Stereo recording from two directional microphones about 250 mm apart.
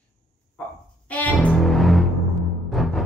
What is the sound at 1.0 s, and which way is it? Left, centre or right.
Music, centre.